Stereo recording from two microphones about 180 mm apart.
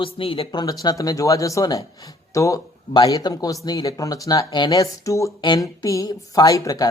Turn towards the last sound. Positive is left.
turn(degrees=20)  # may be behind; listen again after turning